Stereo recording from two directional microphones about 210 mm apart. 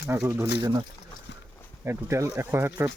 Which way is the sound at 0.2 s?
5° right (ahead or behind).